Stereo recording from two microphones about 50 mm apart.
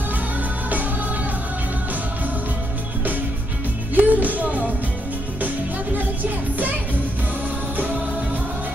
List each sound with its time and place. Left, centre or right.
3.9 s music: right
5.9 s music: right
7.7 s music: right